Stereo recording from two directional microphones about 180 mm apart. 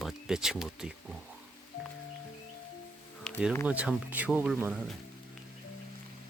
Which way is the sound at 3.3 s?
5° left (ahead or behind).